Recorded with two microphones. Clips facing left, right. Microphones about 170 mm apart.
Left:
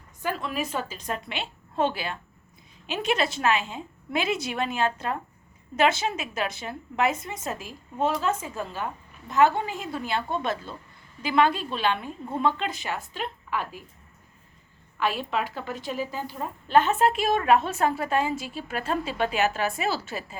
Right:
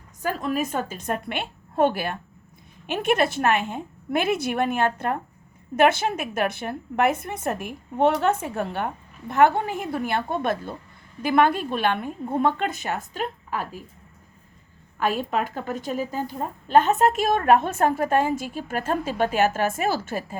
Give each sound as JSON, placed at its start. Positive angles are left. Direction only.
{"t": 0.2, "sound": "a woman's voice", "side_deg": -40}
{"t": 14.9, "sound": "a woman's voice", "side_deg": -45}